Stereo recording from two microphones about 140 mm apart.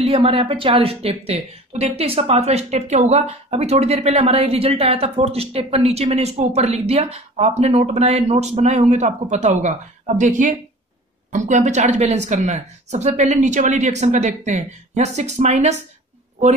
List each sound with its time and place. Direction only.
0.0 s a woman's voice: 40° right (ahead or behind)